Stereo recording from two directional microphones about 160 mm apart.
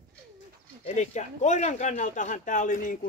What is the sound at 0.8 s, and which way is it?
Speech, 45° left (ahead or behind).